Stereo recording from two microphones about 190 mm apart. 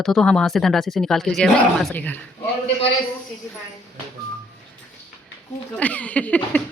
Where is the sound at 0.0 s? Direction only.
Centre (ahead or behind).